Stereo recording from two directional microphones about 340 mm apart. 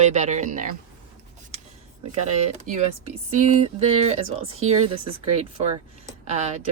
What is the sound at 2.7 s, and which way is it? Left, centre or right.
Speech, right.